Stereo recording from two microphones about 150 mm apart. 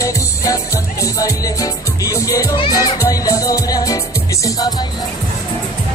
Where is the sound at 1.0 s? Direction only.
25° left (ahead or behind).